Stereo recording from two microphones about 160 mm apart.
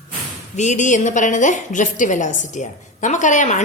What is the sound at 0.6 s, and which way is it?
A woman's voice, 50° left (ahead or behind).